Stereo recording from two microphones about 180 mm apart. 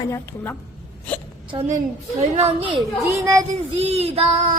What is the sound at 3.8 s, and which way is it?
Speech, 35° right (ahead or behind).